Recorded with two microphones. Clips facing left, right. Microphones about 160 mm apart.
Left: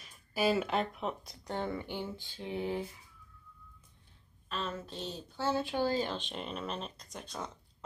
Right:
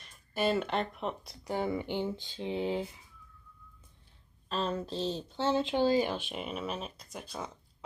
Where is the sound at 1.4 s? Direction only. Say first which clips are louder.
Right 4 dB; 10° right (ahead or behind).